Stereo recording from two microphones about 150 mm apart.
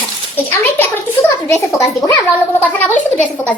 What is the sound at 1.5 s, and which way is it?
A woman's voice, 15° left (ahead or behind).